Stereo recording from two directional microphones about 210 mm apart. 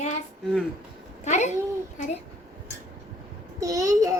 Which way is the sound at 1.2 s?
35° left (ahead or behind).